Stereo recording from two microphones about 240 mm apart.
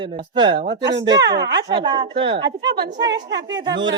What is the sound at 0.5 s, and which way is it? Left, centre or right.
Speech, right.